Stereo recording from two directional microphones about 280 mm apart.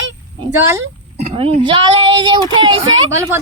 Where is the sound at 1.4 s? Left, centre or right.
Centre.